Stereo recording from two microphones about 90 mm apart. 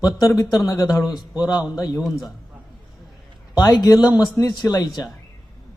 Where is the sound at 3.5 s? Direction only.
45° left (ahead or behind).